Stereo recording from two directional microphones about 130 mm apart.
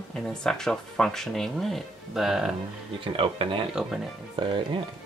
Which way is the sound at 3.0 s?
40° right (ahead or behind).